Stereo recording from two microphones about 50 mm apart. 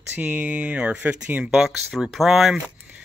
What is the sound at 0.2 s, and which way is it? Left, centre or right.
Speech, right.